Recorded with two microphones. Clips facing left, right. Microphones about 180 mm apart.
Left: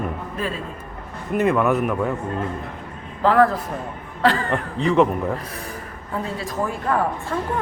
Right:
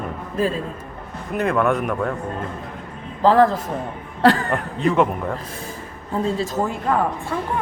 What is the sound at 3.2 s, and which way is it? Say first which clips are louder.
Speech: right 2 dB; 30° right (ahead or behind).